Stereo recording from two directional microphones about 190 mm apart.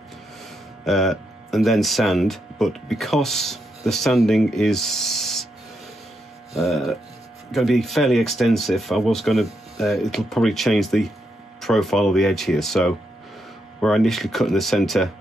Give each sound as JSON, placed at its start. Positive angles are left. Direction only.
{"t": 0.8, "sound": "speech", "side_deg": 0}
{"t": 6.5, "sound": "speech", "side_deg": 0}